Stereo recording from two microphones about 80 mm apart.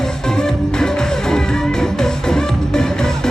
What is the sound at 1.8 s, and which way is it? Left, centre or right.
Music, centre.